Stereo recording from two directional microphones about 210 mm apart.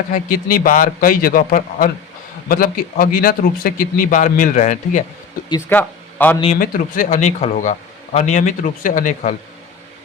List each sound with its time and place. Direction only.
0.1 s speech: 40° left (ahead or behind)
5.5 s speech: 10° left (ahead or behind)
6.4 s speech: 35° left (ahead or behind)